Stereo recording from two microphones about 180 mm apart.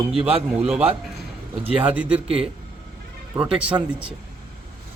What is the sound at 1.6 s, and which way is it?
Speech, 30° right (ahead or behind).